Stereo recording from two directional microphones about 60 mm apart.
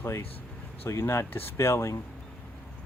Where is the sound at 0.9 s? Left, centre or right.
Left.